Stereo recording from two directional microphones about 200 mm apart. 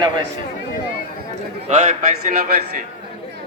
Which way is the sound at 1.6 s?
35° right (ahead or behind).